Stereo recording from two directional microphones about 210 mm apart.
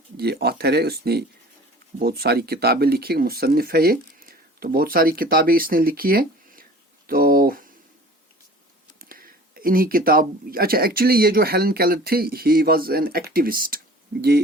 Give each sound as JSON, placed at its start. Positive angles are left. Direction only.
{"t": 0.2, "sound": "speech", "side_deg": -50}
{"t": 9.0, "sound": "speech", "side_deg": -45}